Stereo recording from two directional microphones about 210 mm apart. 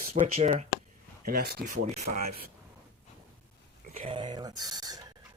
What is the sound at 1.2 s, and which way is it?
Speech, 45° right (ahead or behind).